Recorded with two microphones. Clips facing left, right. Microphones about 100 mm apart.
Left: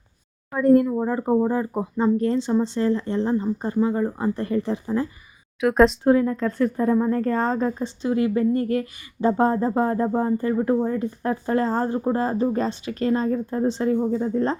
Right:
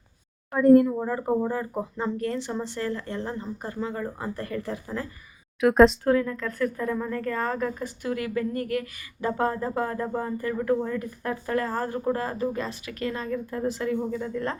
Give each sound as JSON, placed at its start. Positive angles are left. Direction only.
{"t": 0.5, "sound": "speech", "side_deg": 0}
{"t": 0.9, "sound": "a woman's voice", "side_deg": 20}
{"t": 5.5, "sound": "speech", "side_deg": 0}
{"t": 6.1, "sound": "a woman's voice", "side_deg": 25}